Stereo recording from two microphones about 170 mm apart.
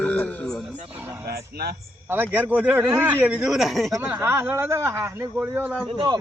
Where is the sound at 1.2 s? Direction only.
65° right (ahead or behind).